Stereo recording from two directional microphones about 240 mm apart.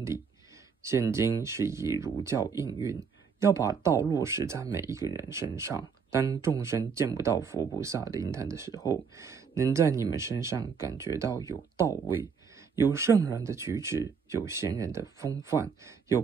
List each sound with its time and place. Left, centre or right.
0.8 s speech: centre
8.7 s speech: centre
9.1 s speech: centre
12.9 s speech: centre